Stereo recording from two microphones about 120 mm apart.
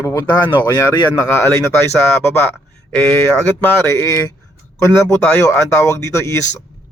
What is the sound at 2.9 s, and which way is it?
Speech, 20° left (ahead or behind).